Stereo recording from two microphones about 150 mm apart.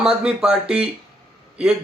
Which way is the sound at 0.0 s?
5° right (ahead or behind).